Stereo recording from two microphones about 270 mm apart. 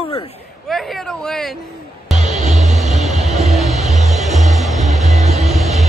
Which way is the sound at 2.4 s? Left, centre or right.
Right.